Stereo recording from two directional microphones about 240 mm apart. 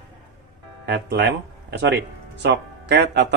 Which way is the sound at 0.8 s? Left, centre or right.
Right.